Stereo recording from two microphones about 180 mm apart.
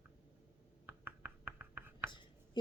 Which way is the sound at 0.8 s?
10° right (ahead or behind).